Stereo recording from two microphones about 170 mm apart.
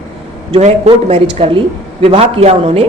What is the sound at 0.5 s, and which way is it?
A woman's voice, 40° right (ahead or behind).